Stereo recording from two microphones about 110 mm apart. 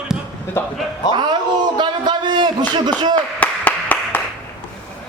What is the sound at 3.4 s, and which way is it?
Clapping, 15° left (ahead or behind).